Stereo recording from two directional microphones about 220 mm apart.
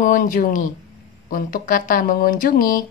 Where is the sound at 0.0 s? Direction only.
40° left (ahead or behind).